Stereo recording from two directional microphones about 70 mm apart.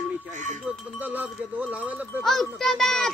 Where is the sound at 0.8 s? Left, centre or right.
Right.